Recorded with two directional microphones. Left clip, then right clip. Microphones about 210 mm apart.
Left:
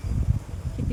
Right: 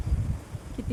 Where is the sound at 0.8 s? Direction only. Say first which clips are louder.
Left 1 dB; 15° right (ahead or behind).